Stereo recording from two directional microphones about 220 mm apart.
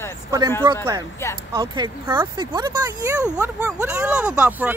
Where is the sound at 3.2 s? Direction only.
5° right (ahead or behind).